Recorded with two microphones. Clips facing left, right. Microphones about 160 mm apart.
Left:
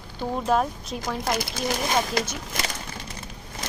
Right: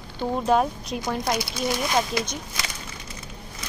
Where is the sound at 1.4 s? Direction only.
50° left (ahead or behind).